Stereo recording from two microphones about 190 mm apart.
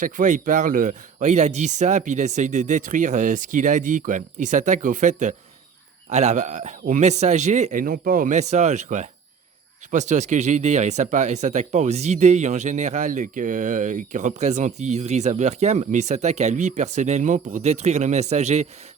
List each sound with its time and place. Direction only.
0.0 s speech: 40° right (ahead or behind)